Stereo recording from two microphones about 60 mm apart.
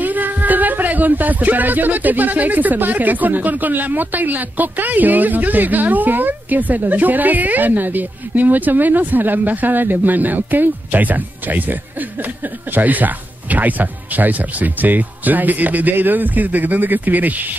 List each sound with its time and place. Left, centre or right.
0.0 s speech: right